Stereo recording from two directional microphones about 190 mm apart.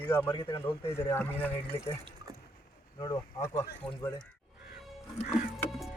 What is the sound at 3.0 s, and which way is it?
Speech, 15° left (ahead or behind).